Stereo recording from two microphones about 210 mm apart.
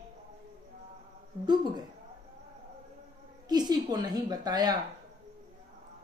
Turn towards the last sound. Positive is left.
turn(degrees=-20)  # may be behind; listen again after turning